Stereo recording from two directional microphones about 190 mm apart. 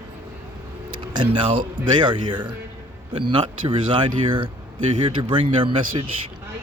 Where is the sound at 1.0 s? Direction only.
25° right (ahead or behind).